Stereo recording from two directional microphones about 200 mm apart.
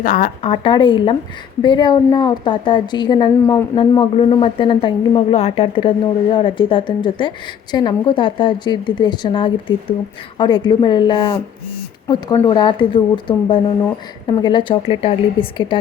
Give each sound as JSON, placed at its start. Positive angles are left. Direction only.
{"t": 0.0, "sound": "a woman's voice", "side_deg": 45}
{"t": 0.4, "sound": "a woman's voice", "side_deg": 25}